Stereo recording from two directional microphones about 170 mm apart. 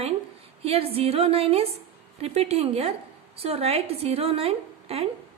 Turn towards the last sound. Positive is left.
turn(degrees=-35)  # may be behind; listen again after turning